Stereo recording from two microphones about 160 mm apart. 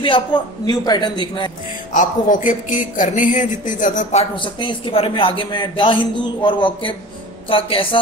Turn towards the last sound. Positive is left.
turn(degrees=35)  # may be behind; listen again after turning